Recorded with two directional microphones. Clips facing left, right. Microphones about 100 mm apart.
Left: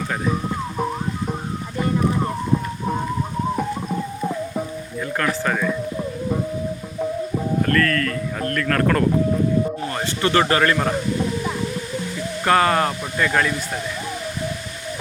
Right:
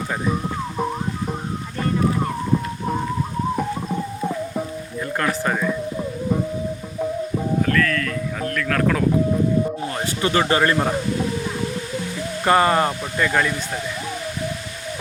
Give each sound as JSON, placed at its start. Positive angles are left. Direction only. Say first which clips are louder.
{"t": 0.3, "sound": "music", "louder": "even", "side_deg": 0}
{"t": 7.6, "sound": "music", "louder": "left 2 dB", "side_deg": 0}
{"t": 9.8, "sound": "a sound", "louder": "left 1 dB", "side_deg": -10}
{"t": 10.5, "sound": "a man's voice", "louder": "even", "side_deg": -25}
{"t": 10.8, "sound": "speech", "louder": "right 1 dB", "side_deg": -5}
{"t": 12.5, "sound": "speech", "louder": "right 1 dB", "side_deg": -10}